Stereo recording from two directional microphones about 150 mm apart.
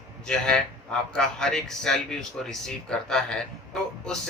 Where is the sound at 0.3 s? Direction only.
5° left (ahead or behind).